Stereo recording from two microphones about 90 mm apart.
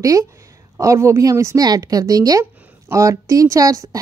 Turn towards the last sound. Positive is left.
turn(degrees=-40)  # may be behind; listen again after turning